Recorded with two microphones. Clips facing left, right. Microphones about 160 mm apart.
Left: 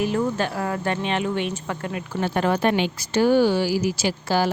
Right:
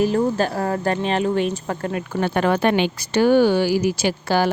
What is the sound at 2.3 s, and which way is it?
Speech, 70° right (ahead or behind).